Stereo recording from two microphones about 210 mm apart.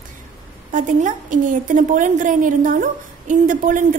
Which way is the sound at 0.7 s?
40° right (ahead or behind).